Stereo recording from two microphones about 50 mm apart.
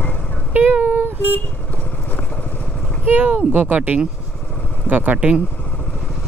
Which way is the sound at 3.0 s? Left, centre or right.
Right.